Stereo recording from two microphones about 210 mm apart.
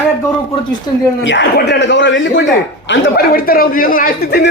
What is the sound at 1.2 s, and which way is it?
A man's voice, 60° left (ahead or behind).